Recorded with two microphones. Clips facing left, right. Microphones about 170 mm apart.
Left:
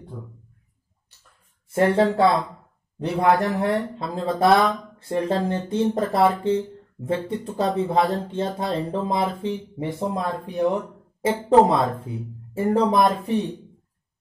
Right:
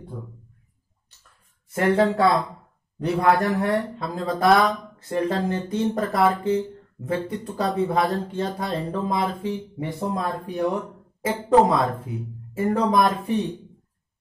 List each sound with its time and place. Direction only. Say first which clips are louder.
1.7 s speech: left 1 dB; 30° left (ahead or behind)